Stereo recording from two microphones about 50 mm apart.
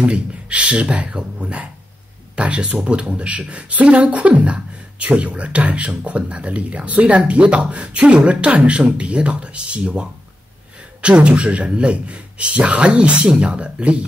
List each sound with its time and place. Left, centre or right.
0.1 s speech: right